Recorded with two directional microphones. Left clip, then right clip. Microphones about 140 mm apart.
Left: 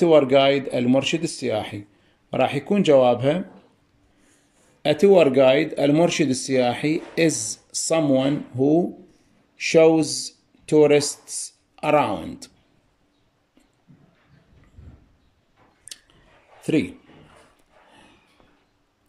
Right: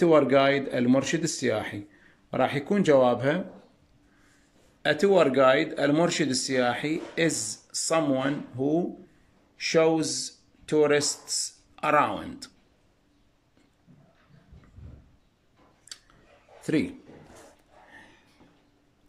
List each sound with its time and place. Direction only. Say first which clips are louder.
0.0 s speech: left 5 dB; 10° left (ahead or behind)
4.8 s speech: left 6 dB; 20° left (ahead or behind)
16.6 s a man's voice: left 5 dB; 15° left (ahead or behind)